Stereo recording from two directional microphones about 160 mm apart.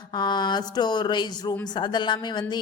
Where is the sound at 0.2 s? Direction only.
25° left (ahead or behind).